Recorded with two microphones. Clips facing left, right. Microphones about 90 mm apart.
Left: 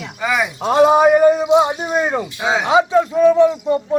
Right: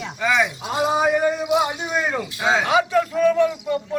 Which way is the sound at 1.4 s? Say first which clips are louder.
Left 6 dB; 25° left (ahead or behind).